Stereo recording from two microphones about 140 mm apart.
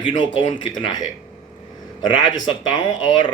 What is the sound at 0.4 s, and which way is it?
Speech, 35° left (ahead or behind).